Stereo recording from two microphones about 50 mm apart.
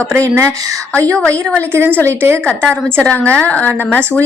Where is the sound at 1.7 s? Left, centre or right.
Right.